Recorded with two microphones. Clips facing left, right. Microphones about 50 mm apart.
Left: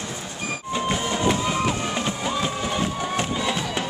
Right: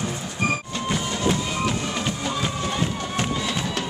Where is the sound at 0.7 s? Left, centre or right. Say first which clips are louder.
Left 2 dB; centre.